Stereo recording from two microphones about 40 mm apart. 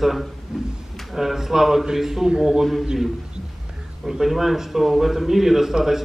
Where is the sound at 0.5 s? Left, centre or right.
Centre.